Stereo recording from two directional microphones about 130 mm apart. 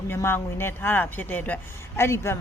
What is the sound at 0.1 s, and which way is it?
A woman's voice, 20° left (ahead or behind).